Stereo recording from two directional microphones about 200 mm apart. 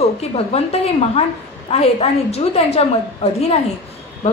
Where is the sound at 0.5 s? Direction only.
30° left (ahead or behind).